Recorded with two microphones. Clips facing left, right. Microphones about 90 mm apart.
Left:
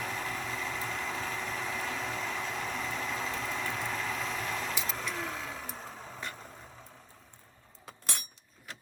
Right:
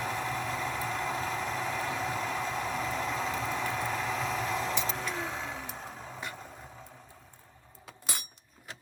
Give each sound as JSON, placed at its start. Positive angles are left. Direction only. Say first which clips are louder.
{"t": 0.0, "sound": "vehicle", "louder": "right 3 dB", "side_deg": -10}
{"t": 3.2, "sound": "a sound", "louder": "right 3 dB", "side_deg": -15}
{"t": 4.7, "sound": "vehicle", "louder": "right 4 dB", "side_deg": 5}
{"t": 5.1, "sound": "vehicle", "louder": "right 2 dB", "side_deg": -25}
{"t": 7.9, "sound": "keys jangling", "louder": "even", "side_deg": -5}